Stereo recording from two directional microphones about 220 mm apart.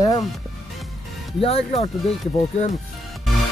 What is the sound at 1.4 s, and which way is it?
Speech, 25° left (ahead or behind).